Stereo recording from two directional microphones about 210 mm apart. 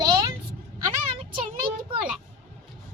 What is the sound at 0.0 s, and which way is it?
Vehicle, 15° right (ahead or behind).